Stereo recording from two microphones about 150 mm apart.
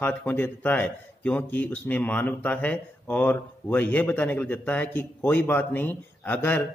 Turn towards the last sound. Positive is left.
turn(degrees=10)  # may be behind; listen again after turning